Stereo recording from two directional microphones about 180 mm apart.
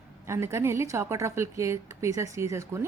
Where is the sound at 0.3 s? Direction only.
15° right (ahead or behind).